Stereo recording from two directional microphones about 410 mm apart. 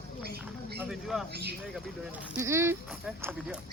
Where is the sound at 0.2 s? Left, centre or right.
Right.